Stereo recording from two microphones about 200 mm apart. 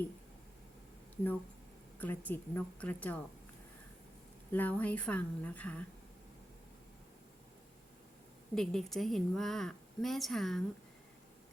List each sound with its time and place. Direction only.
1.1 s speech: 10° left (ahead or behind)
4.5 s speech: 10° left (ahead or behind)
8.5 s a woman's voice: centre (ahead or behind)